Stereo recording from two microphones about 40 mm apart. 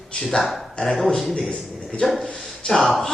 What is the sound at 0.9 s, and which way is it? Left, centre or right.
Speech, centre.